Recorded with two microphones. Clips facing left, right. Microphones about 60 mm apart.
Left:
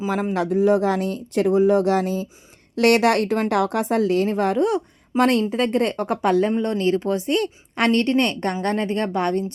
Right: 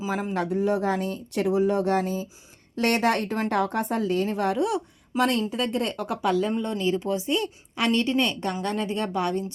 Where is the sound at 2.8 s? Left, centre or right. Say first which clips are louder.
Left 6 dB; left.